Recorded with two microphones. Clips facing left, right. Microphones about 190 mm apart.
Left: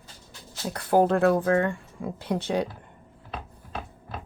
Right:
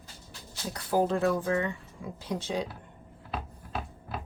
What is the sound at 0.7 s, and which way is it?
Speech, 60° left (ahead or behind).